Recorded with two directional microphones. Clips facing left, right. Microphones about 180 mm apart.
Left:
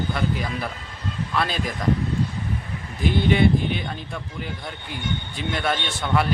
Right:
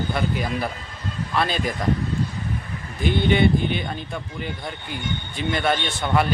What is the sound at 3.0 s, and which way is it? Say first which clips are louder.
Speech: even; centre (ahead or behind).